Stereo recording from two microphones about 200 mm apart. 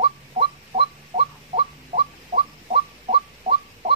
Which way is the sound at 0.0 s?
30° right (ahead or behind).